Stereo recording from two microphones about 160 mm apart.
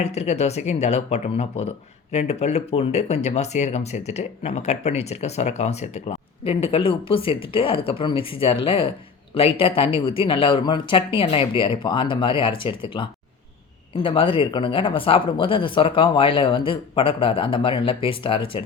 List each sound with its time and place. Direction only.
0.0 s speech: 45° left (ahead or behind)